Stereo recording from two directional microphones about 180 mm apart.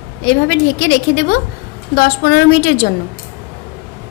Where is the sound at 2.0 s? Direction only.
60° left (ahead or behind).